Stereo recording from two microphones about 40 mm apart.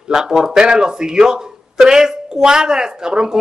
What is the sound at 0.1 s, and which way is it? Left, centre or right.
Speech, centre.